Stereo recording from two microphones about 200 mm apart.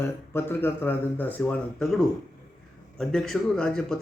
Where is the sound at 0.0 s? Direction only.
10° left (ahead or behind).